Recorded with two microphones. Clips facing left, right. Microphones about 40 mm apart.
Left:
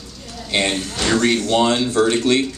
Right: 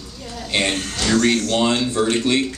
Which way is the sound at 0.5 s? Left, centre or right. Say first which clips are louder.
Left 1 dB; centre.